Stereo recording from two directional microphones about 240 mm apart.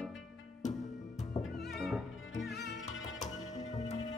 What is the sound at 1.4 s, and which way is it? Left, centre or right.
Music, centre.